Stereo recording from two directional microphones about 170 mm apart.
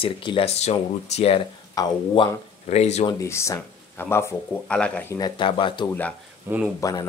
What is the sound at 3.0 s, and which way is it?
Speech, 15° left (ahead or behind).